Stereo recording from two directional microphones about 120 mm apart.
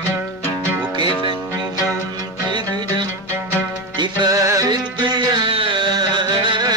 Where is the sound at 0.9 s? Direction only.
40° right (ahead or behind).